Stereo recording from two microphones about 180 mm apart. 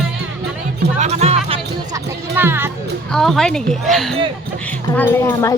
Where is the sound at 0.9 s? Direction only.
40° right (ahead or behind).